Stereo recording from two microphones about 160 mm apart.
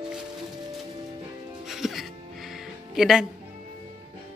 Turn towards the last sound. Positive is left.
turn(degrees=-5)  # may be behind; listen again after turning